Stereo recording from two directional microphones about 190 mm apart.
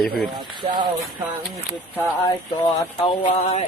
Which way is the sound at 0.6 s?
30° right (ahead or behind).